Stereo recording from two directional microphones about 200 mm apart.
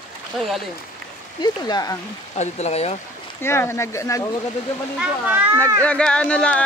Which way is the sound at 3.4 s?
10° left (ahead or behind).